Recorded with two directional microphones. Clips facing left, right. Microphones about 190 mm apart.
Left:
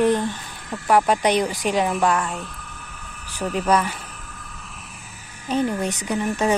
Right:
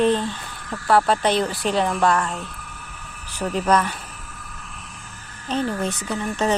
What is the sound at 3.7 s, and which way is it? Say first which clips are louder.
Speech: even; 10° left (ahead or behind).